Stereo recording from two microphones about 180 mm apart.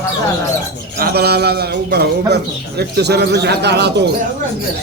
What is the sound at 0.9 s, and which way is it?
A man's voice, 60° right (ahead or behind).